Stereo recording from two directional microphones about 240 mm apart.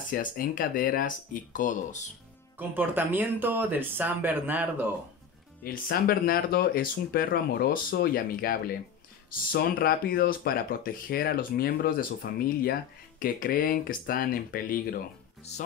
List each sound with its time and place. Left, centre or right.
0.1 s speech: left
2.7 s speech: centre
5.6 s speech: left
15.5 s music: left